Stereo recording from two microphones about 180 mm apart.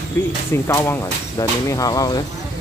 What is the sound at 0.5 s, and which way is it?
Speech, 15° left (ahead or behind).